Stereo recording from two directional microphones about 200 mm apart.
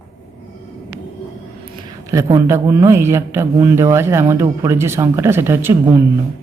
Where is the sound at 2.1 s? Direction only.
15° right (ahead or behind).